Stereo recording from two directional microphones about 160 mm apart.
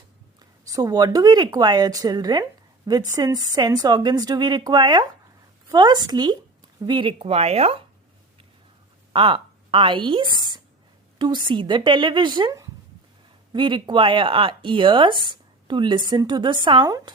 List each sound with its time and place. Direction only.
0.3 s speech: 20° right (ahead or behind); by 7.9 s 40° right (ahead or behind)
9.1 s a woman's voice: 30° right (ahead or behind)
10.3 s a sound: 30° right (ahead or behind)
11.2 s speech: 30° right (ahead or behind)